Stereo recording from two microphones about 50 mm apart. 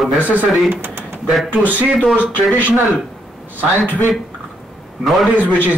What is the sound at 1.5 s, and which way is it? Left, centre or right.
Speech, right.